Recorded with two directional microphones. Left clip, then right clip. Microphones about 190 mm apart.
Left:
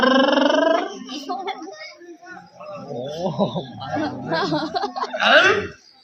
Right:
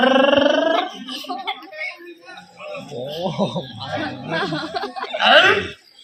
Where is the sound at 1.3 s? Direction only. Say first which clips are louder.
Left 2 dB; 35° left (ahead or behind).